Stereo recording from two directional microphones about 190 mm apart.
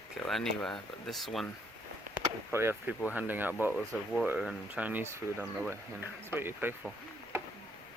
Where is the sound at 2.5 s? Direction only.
10° right (ahead or behind).